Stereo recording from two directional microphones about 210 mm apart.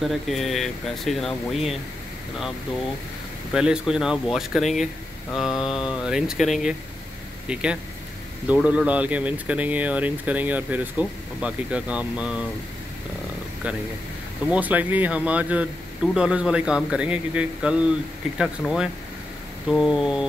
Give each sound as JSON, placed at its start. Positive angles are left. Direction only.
{"t": 0.0, "sound": "speech", "side_deg": 0}
{"t": 3.5, "sound": "speech", "side_deg": -5}
{"t": 14.5, "sound": "speech", "side_deg": -5}